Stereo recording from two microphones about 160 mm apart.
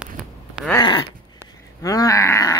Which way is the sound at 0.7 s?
30° left (ahead or behind).